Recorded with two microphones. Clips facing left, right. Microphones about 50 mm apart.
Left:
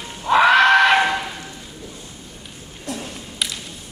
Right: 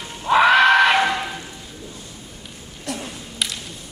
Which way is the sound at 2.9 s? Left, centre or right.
Right.